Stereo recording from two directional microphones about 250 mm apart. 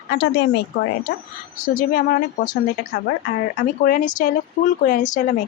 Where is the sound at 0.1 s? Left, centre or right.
Left.